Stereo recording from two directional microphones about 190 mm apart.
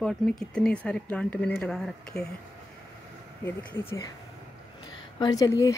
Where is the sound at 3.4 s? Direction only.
10° left (ahead or behind).